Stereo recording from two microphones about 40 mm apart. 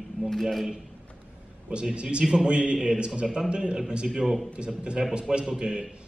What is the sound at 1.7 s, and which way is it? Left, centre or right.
A man's voice, right.